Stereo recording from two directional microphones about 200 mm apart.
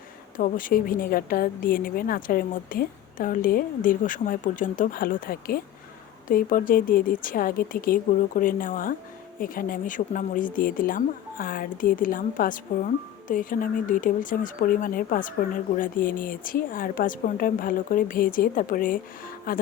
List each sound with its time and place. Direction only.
0.3 s speech: 45° left (ahead or behind)